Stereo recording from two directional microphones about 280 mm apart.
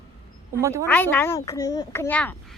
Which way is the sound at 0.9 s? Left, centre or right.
Centre.